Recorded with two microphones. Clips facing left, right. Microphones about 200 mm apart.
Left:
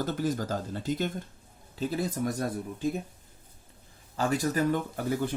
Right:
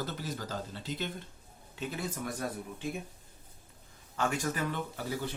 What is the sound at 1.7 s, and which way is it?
Speech, 35° left (ahead or behind).